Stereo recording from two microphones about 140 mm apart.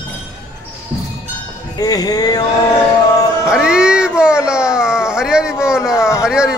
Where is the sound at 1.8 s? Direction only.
25° left (ahead or behind).